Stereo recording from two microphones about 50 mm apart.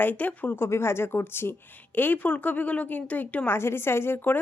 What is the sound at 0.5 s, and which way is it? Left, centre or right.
Speech, left.